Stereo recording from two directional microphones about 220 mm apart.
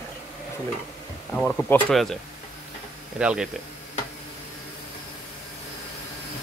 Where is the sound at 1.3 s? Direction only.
5° left (ahead or behind).